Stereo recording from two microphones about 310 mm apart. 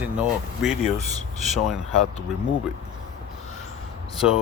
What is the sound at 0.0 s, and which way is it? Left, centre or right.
Speech, centre.